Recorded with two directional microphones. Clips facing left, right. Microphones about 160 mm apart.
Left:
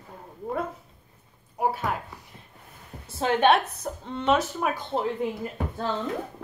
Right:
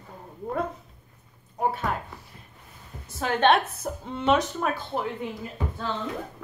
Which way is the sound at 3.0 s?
30° left (ahead or behind).